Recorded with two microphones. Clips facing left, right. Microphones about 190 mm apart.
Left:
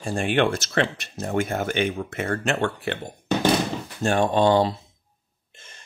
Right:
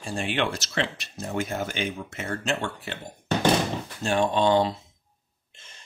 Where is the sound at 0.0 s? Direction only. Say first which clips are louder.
Left 6 dB; 50° left (ahead or behind).